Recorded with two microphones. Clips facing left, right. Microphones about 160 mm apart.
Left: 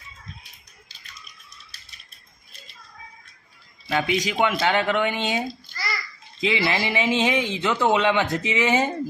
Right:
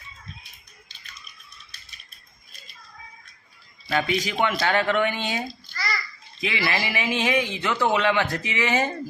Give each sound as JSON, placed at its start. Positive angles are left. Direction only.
{"t": 3.8, "sound": "a man's voice", "side_deg": 15}